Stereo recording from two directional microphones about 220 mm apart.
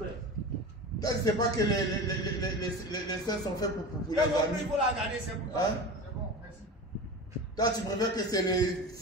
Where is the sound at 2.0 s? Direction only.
15° left (ahead or behind).